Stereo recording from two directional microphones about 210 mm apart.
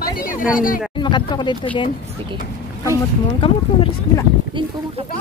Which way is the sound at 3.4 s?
25° left (ahead or behind).